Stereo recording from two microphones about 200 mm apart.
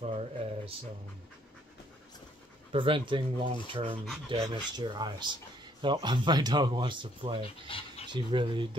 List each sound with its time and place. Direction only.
0.0 s a sound: 30° right (ahead or behind)
2.7 s speech: 25° right (ahead or behind)
7.7 s speech: 25° left (ahead or behind)
8.1 s speech: 25° right (ahead or behind)